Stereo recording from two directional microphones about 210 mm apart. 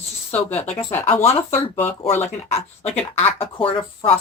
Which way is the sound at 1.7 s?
10° left (ahead or behind).